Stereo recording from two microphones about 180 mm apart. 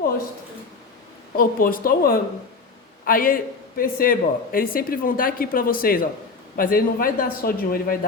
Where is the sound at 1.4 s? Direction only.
55° left (ahead or behind).